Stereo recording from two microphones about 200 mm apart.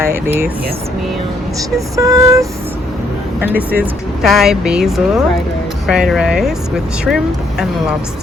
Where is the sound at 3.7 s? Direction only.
Centre (ahead or behind).